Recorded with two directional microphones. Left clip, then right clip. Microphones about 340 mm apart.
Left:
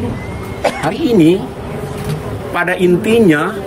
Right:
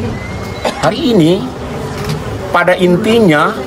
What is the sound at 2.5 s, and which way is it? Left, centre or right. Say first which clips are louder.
Speech: right 4 dB; centre.